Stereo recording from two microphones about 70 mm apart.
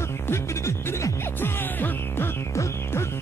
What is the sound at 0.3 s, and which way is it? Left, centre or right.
Music, left.